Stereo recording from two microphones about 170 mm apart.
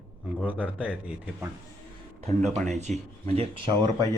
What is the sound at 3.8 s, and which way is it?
Speech, 20° right (ahead or behind).